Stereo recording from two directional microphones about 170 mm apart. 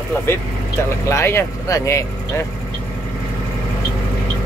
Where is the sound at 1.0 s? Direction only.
15° left (ahead or behind).